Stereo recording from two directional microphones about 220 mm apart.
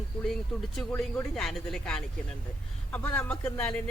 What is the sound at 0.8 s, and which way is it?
Speech, 5° left (ahead or behind).